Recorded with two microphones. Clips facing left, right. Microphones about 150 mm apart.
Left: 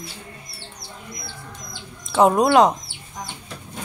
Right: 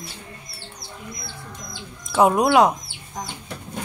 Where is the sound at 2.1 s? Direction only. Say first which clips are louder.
Left 1 dB; 5° right (ahead or behind).